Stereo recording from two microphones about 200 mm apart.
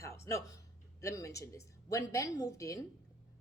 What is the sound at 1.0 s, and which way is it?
A woman's voice, 15° left (ahead or behind).